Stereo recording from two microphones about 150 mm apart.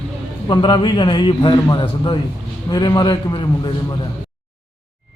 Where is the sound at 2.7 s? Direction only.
30° left (ahead or behind).